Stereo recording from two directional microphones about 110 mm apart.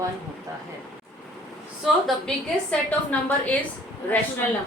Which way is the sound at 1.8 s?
Centre (ahead or behind).